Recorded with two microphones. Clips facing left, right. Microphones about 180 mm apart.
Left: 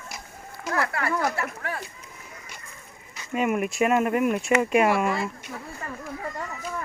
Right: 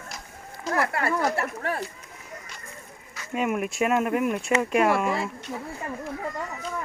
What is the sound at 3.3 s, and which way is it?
Speech, centre (ahead or behind).